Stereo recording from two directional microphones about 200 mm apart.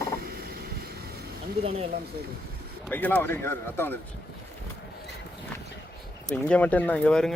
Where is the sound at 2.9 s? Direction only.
10° left (ahead or behind).